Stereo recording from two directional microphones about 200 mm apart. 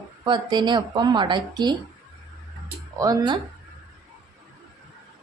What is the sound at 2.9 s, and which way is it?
Speech, 15° right (ahead or behind).